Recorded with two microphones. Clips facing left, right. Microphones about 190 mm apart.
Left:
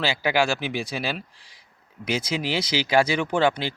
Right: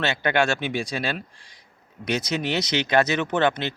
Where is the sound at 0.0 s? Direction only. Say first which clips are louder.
Even; 5° left (ahead or behind).